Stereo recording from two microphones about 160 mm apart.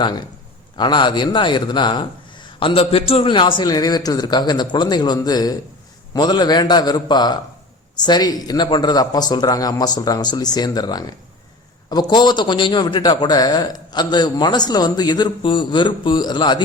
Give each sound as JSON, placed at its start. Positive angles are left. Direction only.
{"t": 0.0, "sound": "a man's voice", "side_deg": 25}